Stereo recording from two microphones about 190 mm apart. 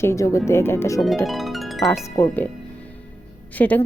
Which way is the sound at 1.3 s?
Centre (ahead or behind).